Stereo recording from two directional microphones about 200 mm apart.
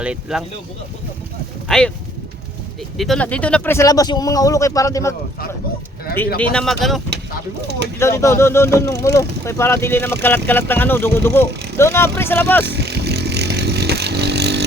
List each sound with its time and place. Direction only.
0.0 s speech: 5° right (ahead or behind)
1.6 s a sound: centre (ahead or behind)
3.0 s speech: 5° left (ahead or behind)
6.4 s speech: 5° left (ahead or behind)
7.9 s speech: 15° left (ahead or behind)
12.6 s vehicle: 55° right (ahead or behind)